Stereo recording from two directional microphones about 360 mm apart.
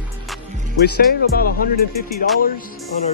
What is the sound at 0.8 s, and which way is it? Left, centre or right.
Speech, left.